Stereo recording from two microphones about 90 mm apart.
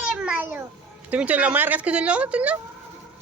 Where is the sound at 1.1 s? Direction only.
15° right (ahead or behind).